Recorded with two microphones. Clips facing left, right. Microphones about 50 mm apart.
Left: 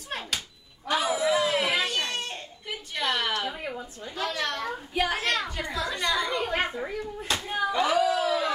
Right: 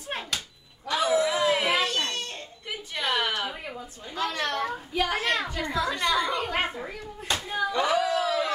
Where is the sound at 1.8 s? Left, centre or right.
Centre.